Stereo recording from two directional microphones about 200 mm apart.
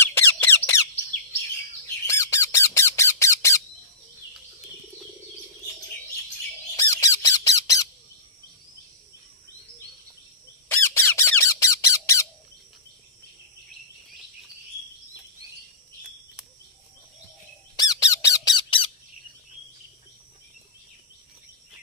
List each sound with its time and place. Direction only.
0.0 s squeak: 10° left (ahead or behind)
2.0 s squawk: 15° left (ahead or behind)
6.8 s squawk: 15° left (ahead or behind)
10.7 s squawk: 10° left (ahead or behind)
17.7 s squawk: 20° left (ahead or behind)